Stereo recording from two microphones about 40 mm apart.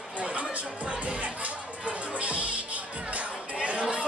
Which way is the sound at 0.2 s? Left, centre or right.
Right.